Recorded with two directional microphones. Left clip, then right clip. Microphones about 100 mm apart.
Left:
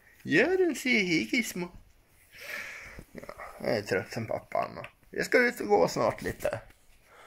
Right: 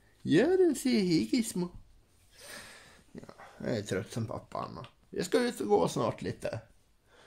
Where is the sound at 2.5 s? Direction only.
70° right (ahead or behind).